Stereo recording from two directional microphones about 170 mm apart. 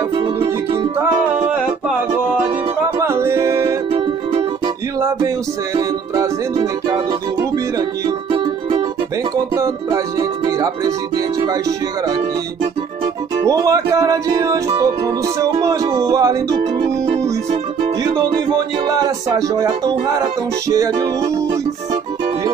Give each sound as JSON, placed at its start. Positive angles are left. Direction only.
{"t": 3.0, "sound": "music", "side_deg": -15}
{"t": 3.9, "sound": "music", "side_deg": -35}
{"t": 5.8, "sound": "music", "side_deg": -20}
{"t": 9.6, "sound": "music", "side_deg": -20}
{"t": 13.5, "sound": "music", "side_deg": -20}
{"t": 18.0, "sound": "music", "side_deg": -20}